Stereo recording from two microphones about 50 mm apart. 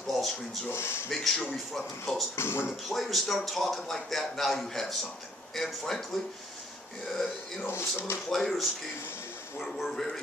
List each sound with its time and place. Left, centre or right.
0.0 s rub: centre
0.7 s speech: left
1.1 s speech: centre
2.3 s speech: left
2.9 s speech: centre
7.6 s speech: left
8.3 s speech: centre